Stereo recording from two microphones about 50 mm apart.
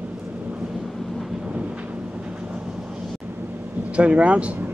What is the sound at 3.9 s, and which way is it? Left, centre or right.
Speech, right.